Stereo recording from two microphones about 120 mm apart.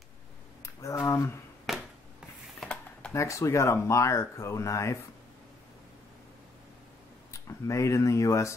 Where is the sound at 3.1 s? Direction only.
25° left (ahead or behind).